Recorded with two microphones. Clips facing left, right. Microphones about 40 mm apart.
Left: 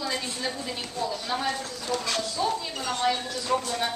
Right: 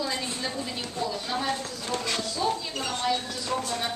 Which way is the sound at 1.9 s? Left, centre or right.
Right.